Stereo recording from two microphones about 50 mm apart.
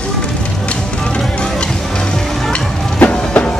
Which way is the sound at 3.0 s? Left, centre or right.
Left.